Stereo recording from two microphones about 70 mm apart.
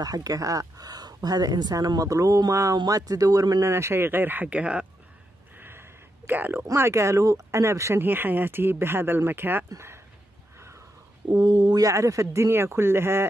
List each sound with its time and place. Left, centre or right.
0.0 s speech: right
3.6 s speech: right; by 4.8 s centre
5.6 s a sound: right
6.6 s speech: right
8.0 s speech: right
11.2 s speech: right
11.8 s speech: right